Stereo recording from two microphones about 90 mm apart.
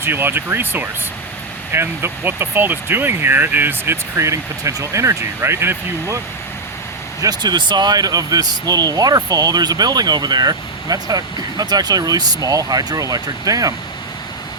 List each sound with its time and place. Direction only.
0.0 s speech: 25° right (ahead or behind)
7.2 s speech: 50° right (ahead or behind)